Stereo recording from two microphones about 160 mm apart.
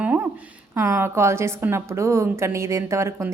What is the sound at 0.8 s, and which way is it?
A woman's voice, 15° right (ahead or behind).